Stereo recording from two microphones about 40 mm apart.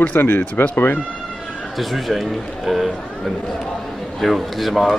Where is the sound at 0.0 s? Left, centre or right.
Left.